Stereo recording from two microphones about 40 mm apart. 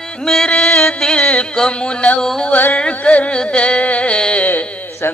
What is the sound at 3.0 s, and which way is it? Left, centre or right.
Mantra, left.